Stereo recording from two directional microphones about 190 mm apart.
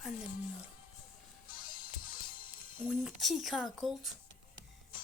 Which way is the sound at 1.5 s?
45° left (ahead or behind).